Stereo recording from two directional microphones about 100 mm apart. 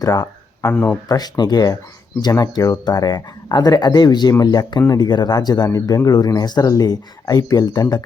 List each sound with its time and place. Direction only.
0.0 s a sound: 35° left (ahead or behind)
0.7 s speech: 20° left (ahead or behind)
1.0 s speech: 40° left (ahead or behind)